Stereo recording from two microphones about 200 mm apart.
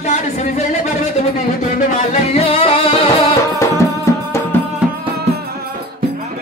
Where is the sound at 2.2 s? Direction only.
30° left (ahead or behind).